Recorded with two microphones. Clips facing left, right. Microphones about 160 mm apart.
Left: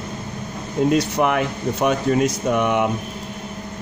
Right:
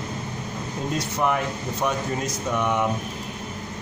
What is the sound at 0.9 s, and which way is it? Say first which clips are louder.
Speech: left 5 dB; 75° left (ahead or behind).